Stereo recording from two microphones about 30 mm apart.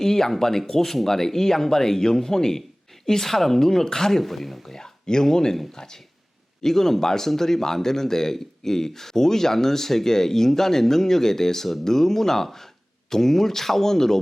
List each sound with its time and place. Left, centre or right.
0.0 s a man's voice: centre
4.2 s speech: centre
4.6 s a man's voice: centre